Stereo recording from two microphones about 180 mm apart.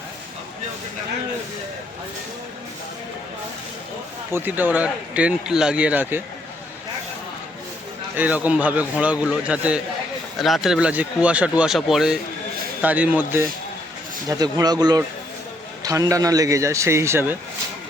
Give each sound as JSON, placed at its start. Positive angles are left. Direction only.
{"t": 4.3, "sound": "a man's voice", "side_deg": -10}
{"t": 8.1, "sound": "a man's voice", "side_deg": -10}
{"t": 14.3, "sound": "a man's voice", "side_deg": -20}